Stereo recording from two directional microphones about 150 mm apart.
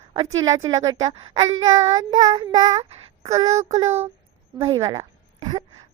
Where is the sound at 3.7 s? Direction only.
45° right (ahead or behind).